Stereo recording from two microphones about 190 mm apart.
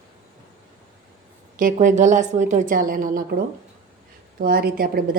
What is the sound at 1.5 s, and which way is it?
A woman's voice, 45° right (ahead or behind).